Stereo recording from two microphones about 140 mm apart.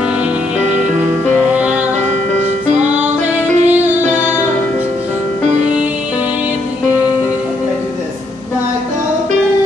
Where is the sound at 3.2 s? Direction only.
55° right (ahead or behind).